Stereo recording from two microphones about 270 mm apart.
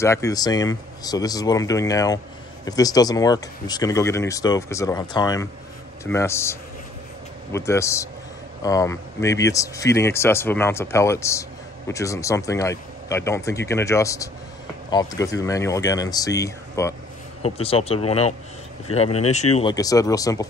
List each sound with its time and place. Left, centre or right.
0.0 s speech: centre
17.4 s speech: left
19.0 s speech: left
19.5 s speech: centre